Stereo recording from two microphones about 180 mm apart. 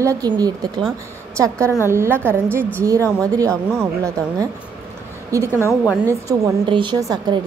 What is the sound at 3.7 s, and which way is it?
A woman's voice, 15° right (ahead or behind).